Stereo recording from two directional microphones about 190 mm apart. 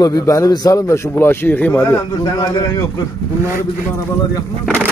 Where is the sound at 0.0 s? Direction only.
20° left (ahead or behind).